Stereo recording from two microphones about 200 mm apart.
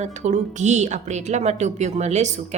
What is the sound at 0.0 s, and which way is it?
A woman's voice, 35° right (ahead or behind).